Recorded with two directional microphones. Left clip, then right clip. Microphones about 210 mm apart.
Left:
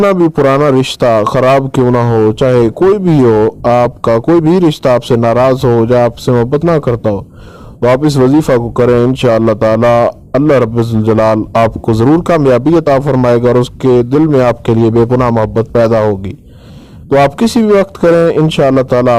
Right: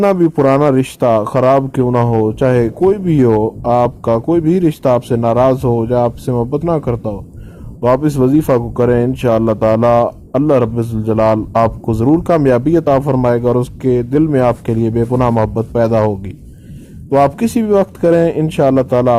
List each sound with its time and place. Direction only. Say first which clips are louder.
0.3 s speech: left 3 dB; 35° left (ahead or behind)
17.3 s speech: left 4 dB; 30° left (ahead or behind)